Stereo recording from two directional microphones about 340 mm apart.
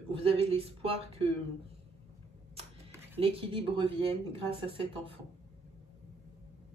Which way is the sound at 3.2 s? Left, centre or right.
Centre.